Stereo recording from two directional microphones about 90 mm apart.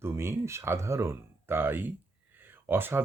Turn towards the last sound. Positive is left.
turn(degrees=-25)  # may be behind; listen again after turning